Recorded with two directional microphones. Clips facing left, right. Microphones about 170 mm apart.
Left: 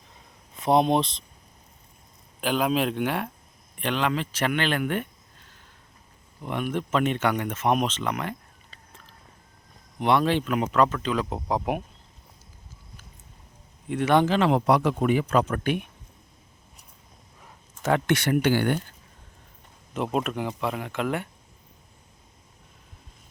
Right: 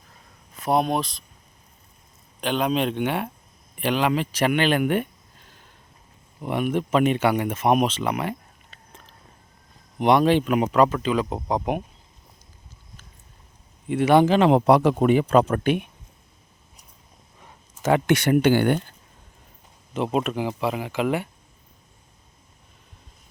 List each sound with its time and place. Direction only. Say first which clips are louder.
0.6 s speech: left 1 dB; 20° left (ahead or behind)
2.4 s speech: right 1 dB; 5° left (ahead or behind); by 5.0 s 15° right (ahead or behind)
6.4 s speech: right 4 dB; 10° right (ahead or behind)
10.0 s speech: right 4 dB; 15° right (ahead or behind); by 11.8 s centre (ahead or behind)
13.8 s speech: right 4 dB; 5° right (ahead or behind); by 15.8 s 25° right (ahead or behind)
17.4 s a sound: right 3 dB; 5° right (ahead or behind)
18.1 s speech: right 5 dB; 20° right (ahead or behind)
20.1 s speech: right 3 dB; 5° right (ahead or behind)